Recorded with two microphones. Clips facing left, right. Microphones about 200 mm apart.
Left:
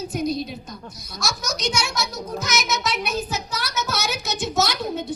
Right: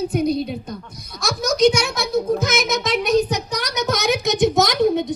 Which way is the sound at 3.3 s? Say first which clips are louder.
Right 5 dB; 15° right (ahead or behind).